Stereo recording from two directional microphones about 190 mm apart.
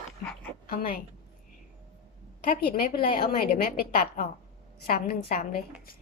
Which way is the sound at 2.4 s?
50° left (ahead or behind).